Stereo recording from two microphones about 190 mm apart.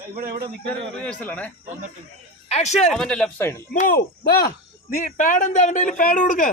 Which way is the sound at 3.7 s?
50° left (ahead or behind).